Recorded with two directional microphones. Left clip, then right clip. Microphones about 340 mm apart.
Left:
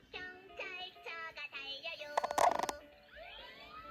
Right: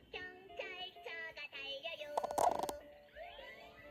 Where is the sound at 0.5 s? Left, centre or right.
Left.